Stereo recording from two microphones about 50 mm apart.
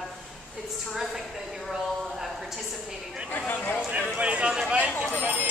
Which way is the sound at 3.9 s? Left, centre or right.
Right.